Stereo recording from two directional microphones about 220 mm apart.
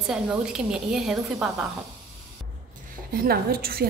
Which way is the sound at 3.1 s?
45° right (ahead or behind).